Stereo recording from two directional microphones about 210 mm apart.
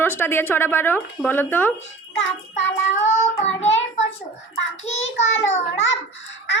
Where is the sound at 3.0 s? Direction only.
30° left (ahead or behind).